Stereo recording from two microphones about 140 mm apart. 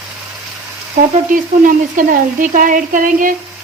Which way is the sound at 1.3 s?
75° right (ahead or behind).